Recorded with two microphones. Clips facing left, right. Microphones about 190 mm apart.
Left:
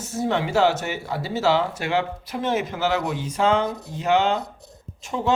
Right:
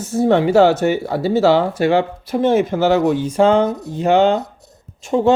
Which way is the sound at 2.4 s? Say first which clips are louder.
Right 9 dB; 50° right (ahead or behind).